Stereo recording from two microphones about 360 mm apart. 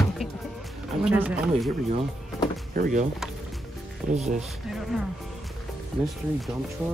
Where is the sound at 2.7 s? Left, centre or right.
Right.